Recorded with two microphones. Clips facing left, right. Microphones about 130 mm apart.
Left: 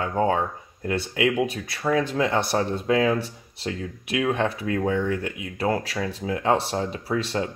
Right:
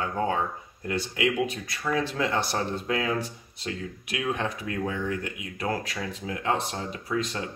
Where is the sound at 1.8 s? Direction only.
50° left (ahead or behind).